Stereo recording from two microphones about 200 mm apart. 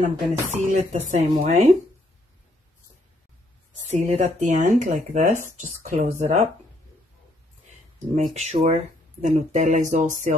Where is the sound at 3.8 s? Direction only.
35° right (ahead or behind).